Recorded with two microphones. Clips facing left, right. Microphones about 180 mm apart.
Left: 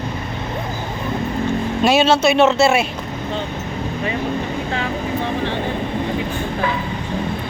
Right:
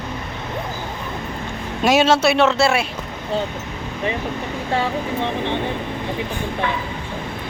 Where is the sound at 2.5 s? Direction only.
25° left (ahead or behind).